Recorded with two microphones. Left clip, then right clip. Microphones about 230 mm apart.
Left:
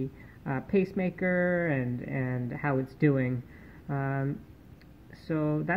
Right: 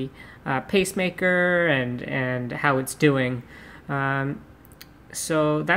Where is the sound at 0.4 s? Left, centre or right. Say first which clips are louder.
Right 6 dB; centre.